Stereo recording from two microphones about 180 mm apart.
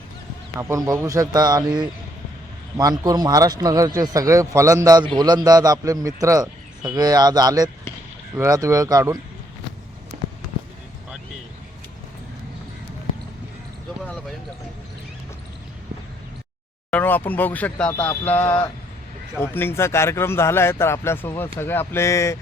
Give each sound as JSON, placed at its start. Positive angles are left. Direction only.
{"t": 0.6, "sound": "a man's voice", "side_deg": -15}
{"t": 2.7, "sound": "a man's voice", "side_deg": -20}
{"t": 16.9, "sound": "speech", "side_deg": 10}